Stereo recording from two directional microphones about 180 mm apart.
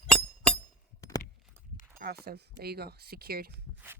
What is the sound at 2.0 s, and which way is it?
Speech, 60° right (ahead or behind).